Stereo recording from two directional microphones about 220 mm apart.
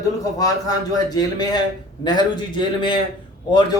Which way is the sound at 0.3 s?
15° left (ahead or behind).